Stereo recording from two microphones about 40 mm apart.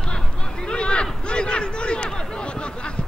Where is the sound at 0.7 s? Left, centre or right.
Left.